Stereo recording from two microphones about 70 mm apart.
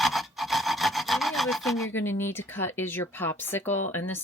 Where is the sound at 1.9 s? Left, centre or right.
Left.